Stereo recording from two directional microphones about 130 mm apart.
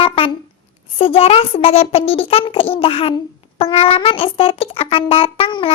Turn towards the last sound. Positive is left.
turn(degrees=40)  # may be behind; listen again after turning